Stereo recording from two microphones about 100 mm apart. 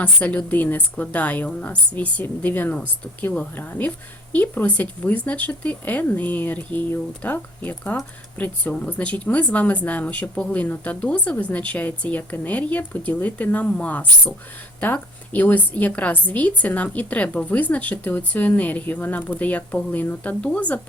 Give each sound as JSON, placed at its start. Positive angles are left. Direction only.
{"t": 0.0, "sound": "a woman's voice", "side_deg": 15}